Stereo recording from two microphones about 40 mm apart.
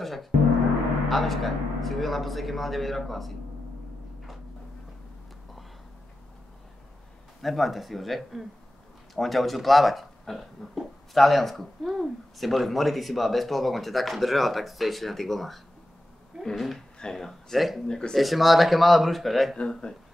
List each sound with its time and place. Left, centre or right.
0.0 s gong: centre
1.0 s speech: centre
7.4 s speech: centre
17.8 s speech: centre
18.1 s speech: centre
19.5 s speech: left